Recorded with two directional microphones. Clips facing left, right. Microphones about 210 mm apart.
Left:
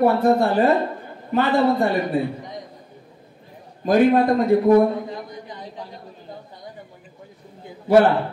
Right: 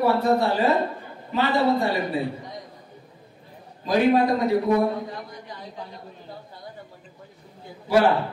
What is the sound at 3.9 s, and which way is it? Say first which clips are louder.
Speech: left 3 dB; 50° left (ahead or behind).